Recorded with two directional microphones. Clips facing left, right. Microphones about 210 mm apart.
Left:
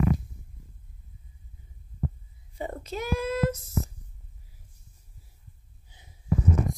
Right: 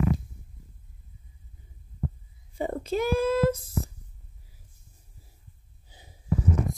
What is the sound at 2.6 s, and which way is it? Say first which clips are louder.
Child singing: right 6 dB; 30° right (ahead or behind).